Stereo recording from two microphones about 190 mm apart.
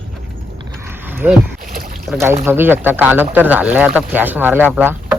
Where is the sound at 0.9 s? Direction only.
10° right (ahead or behind).